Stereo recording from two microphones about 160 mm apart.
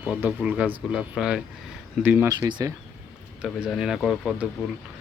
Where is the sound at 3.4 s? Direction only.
5° right (ahead or behind).